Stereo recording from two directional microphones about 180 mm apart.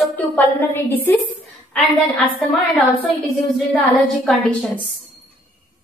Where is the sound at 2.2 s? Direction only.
Centre (ahead or behind).